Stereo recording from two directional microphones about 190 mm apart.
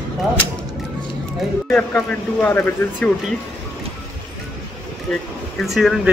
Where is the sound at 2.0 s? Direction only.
10° left (ahead or behind).